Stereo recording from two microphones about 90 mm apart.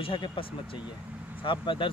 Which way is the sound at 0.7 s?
15° right (ahead or behind).